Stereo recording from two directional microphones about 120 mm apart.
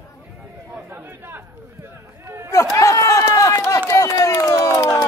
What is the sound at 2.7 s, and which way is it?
Run, 25° left (ahead or behind).